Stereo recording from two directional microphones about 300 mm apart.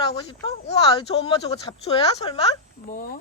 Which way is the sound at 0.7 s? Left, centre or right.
Centre.